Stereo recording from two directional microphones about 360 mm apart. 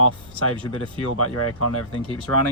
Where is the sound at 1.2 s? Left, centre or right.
Left.